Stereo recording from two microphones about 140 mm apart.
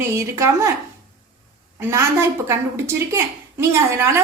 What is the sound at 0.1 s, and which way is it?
Speech, 20° right (ahead or behind).